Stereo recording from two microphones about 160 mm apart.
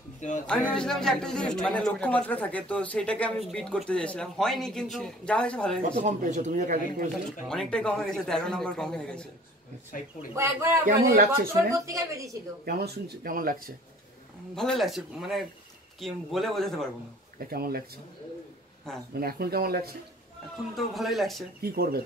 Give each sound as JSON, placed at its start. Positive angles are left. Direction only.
{"t": 0.5, "sound": "speech", "side_deg": 5}
{"t": 5.8, "sound": "speech", "side_deg": -55}
{"t": 7.1, "sound": "speech", "side_deg": 5}
{"t": 10.3, "sound": "a man's voice", "side_deg": -15}
{"t": 10.9, "sound": "speech", "side_deg": -60}
{"t": 11.7, "sound": "a woman's voice", "side_deg": -20}
{"t": 12.6, "sound": "speech", "side_deg": -85}
{"t": 14.5, "sound": "speech", "side_deg": 5}
{"t": 17.4, "sound": "speech", "side_deg": -70}
{"t": 19.1, "sound": "speech", "side_deg": -75}
{"t": 20.7, "sound": "speech", "side_deg": 0}
{"t": 21.5, "sound": "speech", "side_deg": -70}